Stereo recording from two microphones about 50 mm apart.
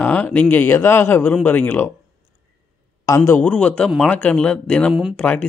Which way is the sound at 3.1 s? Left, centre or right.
Left.